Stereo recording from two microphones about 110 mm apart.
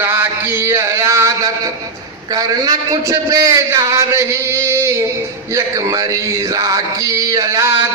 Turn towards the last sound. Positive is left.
turn(degrees=-25)  # may be behind; listen again after turning